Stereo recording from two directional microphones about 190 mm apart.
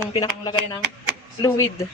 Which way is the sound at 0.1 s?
20° left (ahead or behind).